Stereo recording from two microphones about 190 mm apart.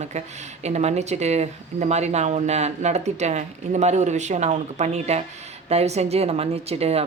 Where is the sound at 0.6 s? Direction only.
35° right (ahead or behind).